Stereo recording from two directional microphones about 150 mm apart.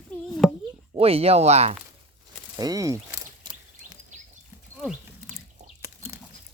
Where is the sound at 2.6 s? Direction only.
25° right (ahead or behind).